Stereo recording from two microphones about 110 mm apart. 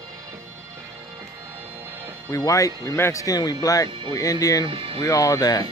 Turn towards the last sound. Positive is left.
turn(degrees=35)  # may be behind; listen again after turning